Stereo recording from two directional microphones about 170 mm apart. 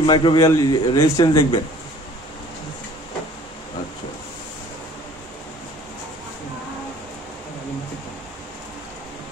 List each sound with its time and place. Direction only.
0.0 s speech: 30° left (ahead or behind)